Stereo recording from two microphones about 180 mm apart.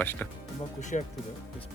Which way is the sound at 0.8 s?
40° left (ahead or behind).